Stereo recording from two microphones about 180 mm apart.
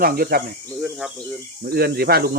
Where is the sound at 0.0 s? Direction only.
55° right (ahead or behind).